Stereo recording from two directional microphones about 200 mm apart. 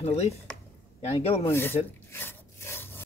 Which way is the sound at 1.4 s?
10° left (ahead or behind).